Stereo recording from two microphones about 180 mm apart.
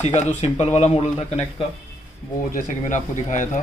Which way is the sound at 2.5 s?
45° left (ahead or behind).